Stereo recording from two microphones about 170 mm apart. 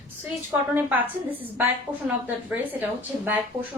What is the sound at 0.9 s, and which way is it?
Speech, 10° right (ahead or behind).